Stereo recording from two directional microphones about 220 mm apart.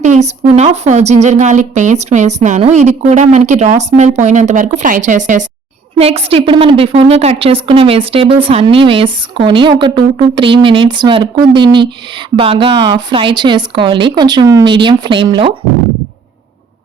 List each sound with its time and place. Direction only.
0.0 s a woman's voice: 30° right (ahead or behind)